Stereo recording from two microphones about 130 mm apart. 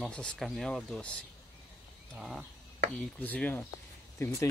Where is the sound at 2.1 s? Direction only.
Centre (ahead or behind).